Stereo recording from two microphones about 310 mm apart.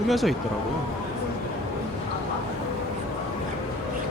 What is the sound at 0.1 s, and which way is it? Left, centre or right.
Speech, centre.